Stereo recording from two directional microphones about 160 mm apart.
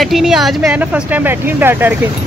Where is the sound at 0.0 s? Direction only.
Centre (ahead or behind).